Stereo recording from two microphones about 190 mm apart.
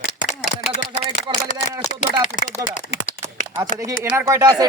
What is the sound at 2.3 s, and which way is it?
Speech, 55° left (ahead or behind).